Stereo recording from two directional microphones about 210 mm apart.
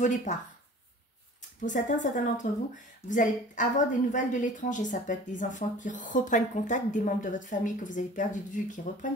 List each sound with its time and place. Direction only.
0.0 s a woman's voice: 35° left (ahead or behind)
1.6 s a woman's voice: 35° left (ahead or behind)